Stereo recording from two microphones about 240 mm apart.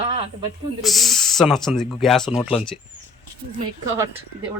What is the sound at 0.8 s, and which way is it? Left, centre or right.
Speech, centre.